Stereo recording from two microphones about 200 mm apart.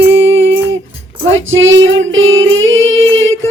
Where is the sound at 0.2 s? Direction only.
70° right (ahead or behind).